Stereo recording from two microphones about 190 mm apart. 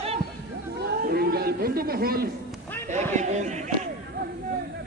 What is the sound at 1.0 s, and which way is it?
A man's voice, 55° right (ahead or behind).